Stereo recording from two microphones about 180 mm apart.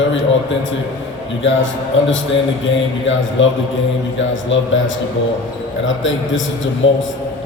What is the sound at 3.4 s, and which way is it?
Speech, 90° left.